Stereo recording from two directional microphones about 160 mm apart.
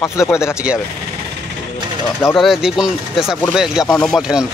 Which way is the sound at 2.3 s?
Centre (ahead or behind).